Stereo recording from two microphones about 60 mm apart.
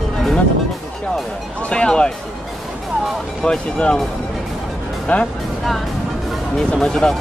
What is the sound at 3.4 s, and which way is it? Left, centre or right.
Speech, centre.